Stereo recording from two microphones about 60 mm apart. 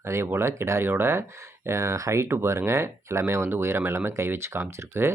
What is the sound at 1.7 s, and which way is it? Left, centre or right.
Speech, right.